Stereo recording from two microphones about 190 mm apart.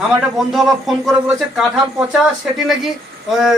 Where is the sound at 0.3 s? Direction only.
Centre (ahead or behind).